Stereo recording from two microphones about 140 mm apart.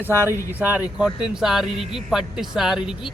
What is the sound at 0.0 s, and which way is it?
A man's voice, 15° right (ahead or behind).